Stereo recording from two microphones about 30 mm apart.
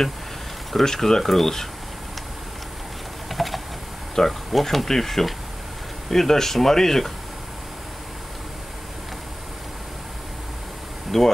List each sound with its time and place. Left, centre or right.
0.8 s speech: centre
3.3 s a sound: centre
4.1 s speech: centre
11.1 s speech: centre